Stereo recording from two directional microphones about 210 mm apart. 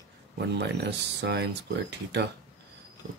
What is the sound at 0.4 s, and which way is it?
Speech, 55° right (ahead or behind).